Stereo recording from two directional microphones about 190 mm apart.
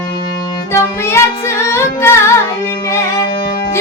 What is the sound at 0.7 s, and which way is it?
Music, 15° left (ahead or behind).